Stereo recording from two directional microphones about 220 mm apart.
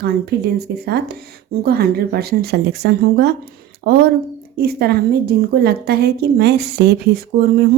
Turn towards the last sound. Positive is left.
turn(degrees=-45)  # may be behind; listen again after turning